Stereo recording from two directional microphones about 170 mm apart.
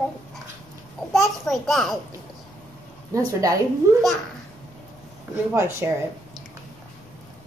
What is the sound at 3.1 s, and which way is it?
Speech, 20° right (ahead or behind).